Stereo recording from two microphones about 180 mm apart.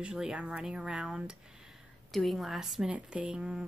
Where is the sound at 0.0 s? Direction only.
5° right (ahead or behind).